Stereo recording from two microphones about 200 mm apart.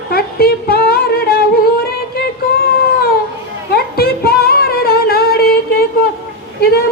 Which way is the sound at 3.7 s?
50° left (ahead or behind).